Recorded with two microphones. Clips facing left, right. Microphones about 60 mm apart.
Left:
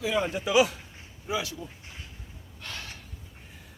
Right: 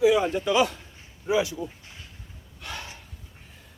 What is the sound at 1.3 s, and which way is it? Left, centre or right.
Speech, right.